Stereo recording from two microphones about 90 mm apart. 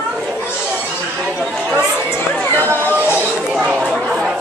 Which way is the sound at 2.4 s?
20° left (ahead or behind).